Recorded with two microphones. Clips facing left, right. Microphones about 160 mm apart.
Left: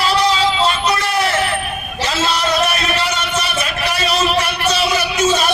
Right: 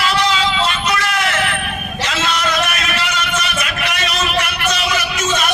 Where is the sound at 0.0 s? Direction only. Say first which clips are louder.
Left 2 dB; 35° left (ahead or behind).